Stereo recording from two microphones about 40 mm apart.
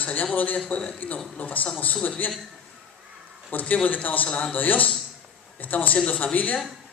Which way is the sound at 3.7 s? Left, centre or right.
Left.